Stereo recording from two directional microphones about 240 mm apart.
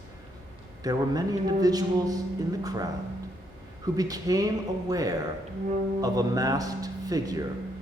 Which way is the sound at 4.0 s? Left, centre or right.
Centre.